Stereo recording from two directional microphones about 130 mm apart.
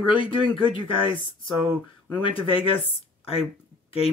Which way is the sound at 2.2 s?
45° left (ahead or behind).